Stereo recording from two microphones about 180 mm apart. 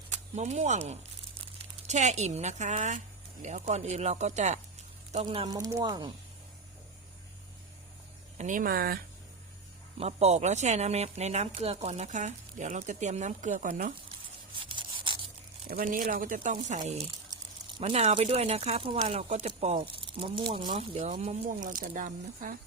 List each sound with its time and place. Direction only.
0.1 s speech: 40° right (ahead or behind)
5.5 s speech: 20° right (ahead or behind)
8.4 s speech: 45° right (ahead or behind)
10.0 s speech: 35° right (ahead or behind)
14.5 s rub: 30° right (ahead or behind)
15.7 s speech: 50° right (ahead or behind); by 21.3 s 35° right (ahead or behind)
21.6 s speech: 50° right (ahead or behind)